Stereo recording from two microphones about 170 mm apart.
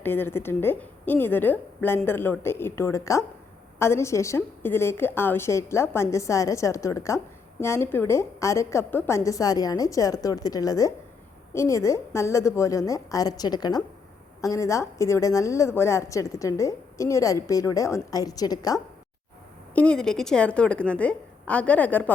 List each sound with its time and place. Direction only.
0.0 s a woman's voice: 10° left (ahead or behind)
19.7 s a woman's voice: 5° left (ahead or behind)